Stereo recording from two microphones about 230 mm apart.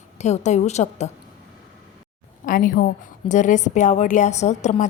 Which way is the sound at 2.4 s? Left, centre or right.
Left.